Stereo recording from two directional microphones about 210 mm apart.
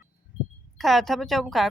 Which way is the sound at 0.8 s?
Centre (ahead or behind).